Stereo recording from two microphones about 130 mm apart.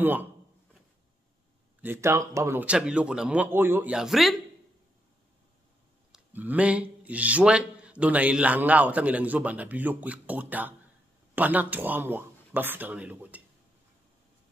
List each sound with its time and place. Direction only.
0.0 s speech: 15° right (ahead or behind)
1.8 s speech: 20° right (ahead or behind)
2.6 s speech: 10° right (ahead or behind)
3.9 s speech: centre (ahead or behind)
6.1 s speech: 10° right (ahead or behind)